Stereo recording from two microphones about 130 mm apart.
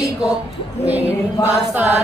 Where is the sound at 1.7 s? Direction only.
15° right (ahead or behind).